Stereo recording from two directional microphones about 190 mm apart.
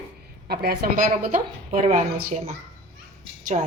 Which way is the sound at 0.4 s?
55° right (ahead or behind).